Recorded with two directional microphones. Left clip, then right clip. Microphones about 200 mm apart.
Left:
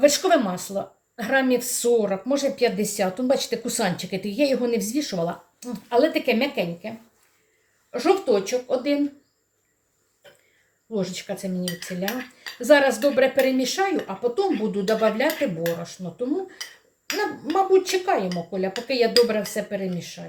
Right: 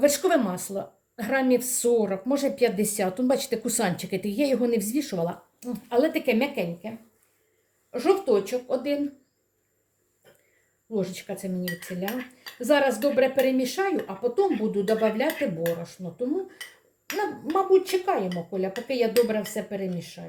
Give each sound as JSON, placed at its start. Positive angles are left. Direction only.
{"t": 0.0, "sound": "a woman's voice", "side_deg": -15}
{"t": 7.9, "sound": "cutlery", "side_deg": -10}
{"t": 10.9, "sound": "cutlery", "side_deg": -10}